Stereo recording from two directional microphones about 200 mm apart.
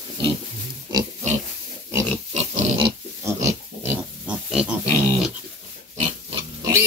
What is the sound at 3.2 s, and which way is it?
Pig, 10° right (ahead or behind).